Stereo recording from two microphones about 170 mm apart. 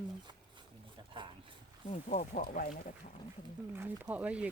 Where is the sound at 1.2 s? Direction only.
30° right (ahead or behind).